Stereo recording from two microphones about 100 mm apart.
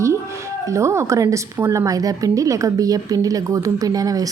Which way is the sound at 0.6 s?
30° right (ahead or behind).